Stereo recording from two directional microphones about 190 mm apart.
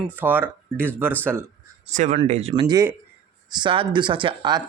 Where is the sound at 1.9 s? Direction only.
40° right (ahead or behind); by 4.6 s 25° right (ahead or behind).